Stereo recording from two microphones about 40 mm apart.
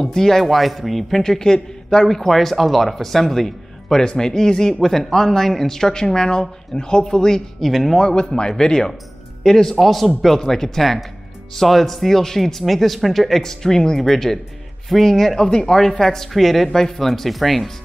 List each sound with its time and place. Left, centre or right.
0.0 s speech: centre
1.2 s a man's voice: centre
2.0 s speech: centre
4.0 s speech: centre
7.6 s speech: centre
8.0 s speech: centre
9.8 s speech: centre